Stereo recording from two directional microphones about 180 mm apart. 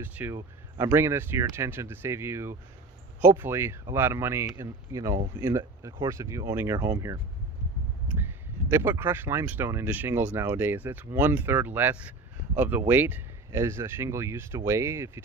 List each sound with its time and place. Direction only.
0.0 s speech: 10° right (ahead or behind)
8.2 s speech: 15° right (ahead or behind)